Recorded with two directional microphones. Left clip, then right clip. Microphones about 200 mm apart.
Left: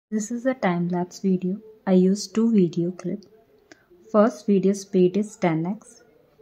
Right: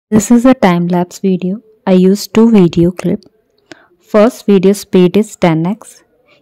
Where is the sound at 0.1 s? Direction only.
45° right (ahead or behind).